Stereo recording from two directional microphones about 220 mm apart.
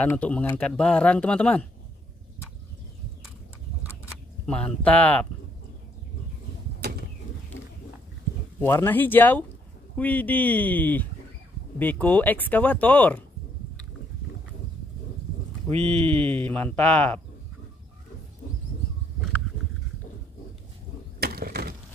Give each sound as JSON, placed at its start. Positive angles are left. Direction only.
{"t": 0.0, "sound": "speech", "side_deg": 5}
{"t": 3.8, "sound": "a sound", "side_deg": -10}
{"t": 4.5, "sound": "speech", "side_deg": 5}
{"t": 8.5, "sound": "speech", "side_deg": 10}
{"t": 15.6, "sound": "speech", "side_deg": 5}
{"t": 21.2, "sound": "a sound", "side_deg": -45}